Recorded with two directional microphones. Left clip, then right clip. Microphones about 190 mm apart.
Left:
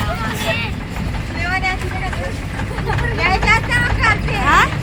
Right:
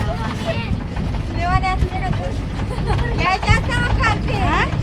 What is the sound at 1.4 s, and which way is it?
Vehicle, 45° right (ahead or behind).